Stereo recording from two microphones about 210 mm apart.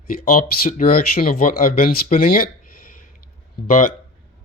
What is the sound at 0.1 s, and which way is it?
Speech, 45° left (ahead or behind).